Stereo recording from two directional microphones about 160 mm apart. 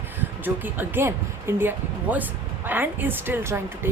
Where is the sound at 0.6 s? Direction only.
10° right (ahead or behind).